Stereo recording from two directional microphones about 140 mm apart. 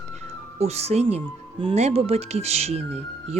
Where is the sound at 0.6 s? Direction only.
50° right (ahead or behind).